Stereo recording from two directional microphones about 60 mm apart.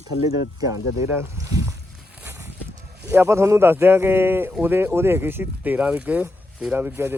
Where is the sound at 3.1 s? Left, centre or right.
Right.